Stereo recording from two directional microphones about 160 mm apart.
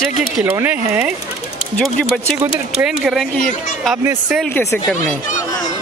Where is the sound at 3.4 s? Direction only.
55° left (ahead or behind).